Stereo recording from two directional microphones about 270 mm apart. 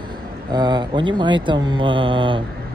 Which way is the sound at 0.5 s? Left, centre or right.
Centre.